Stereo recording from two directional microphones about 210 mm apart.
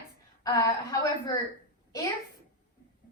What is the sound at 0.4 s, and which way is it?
Speech, 15° left (ahead or behind).